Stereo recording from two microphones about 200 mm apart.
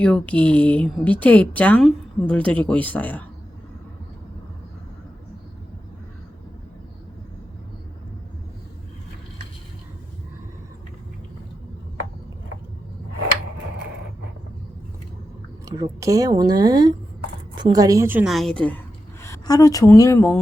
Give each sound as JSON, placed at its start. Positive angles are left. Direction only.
{"t": 0.0, "sound": "speech", "side_deg": 5}
{"t": 15.6, "sound": "a woman's voice", "side_deg": -15}
{"t": 19.2, "sound": "speech", "side_deg": 15}